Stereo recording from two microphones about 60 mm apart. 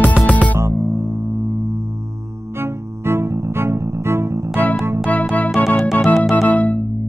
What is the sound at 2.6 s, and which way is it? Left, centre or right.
Music, right.